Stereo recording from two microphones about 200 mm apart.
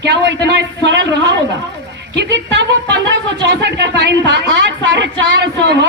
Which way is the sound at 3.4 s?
60° right (ahead or behind).